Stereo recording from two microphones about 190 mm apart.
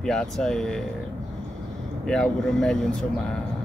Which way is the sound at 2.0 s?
5° left (ahead or behind).